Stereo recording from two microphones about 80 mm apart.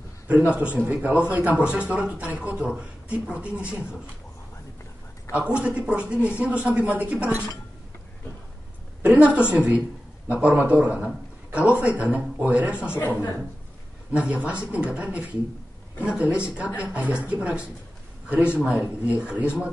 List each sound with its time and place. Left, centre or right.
0.7 s speech: centre
5.3 s speech: centre
9.0 s speech: centre
11.1 s a sound: centre
11.8 s speech: centre
12.9 s speech: left
14.1 s speech: centre
18.8 s speech: centre